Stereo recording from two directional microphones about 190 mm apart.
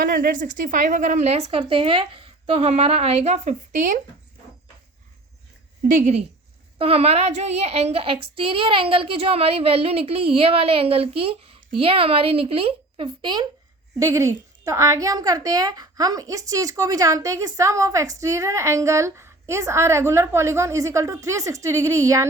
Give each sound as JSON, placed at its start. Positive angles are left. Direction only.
{"t": 0.0, "sound": "speech", "side_deg": -50}
{"t": 5.9, "sound": "a woman's voice", "side_deg": -40}